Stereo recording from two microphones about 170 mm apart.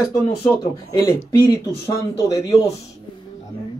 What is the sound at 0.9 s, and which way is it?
Speech, 15° left (ahead or behind).